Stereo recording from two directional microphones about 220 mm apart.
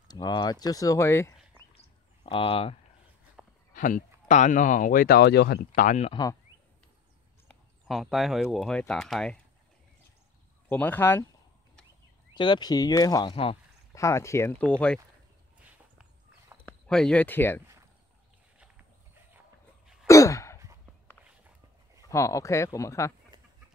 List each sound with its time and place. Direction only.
0.1 s speech: 20° left (ahead or behind)
2.2 s speech: 25° left (ahead or behind)
3.4 s a sound: 5° right (ahead or behind)
3.7 s speech: 40° left (ahead or behind)
5.8 s speech: 35° left (ahead or behind)
7.4 s speech: centre (ahead or behind)
10.7 s speech: 10° left (ahead or behind)
12.4 s speech: 20° left (ahead or behind)
13.9 s speech: 15° left (ahead or behind)
16.6 s speech: 5° left (ahead or behind)
20.1 s sigh: 15° left (ahead or behind)
22.1 s speech: 15° left (ahead or behind)